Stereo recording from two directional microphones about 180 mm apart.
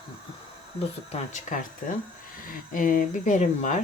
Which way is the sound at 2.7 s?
50° left (ahead or behind).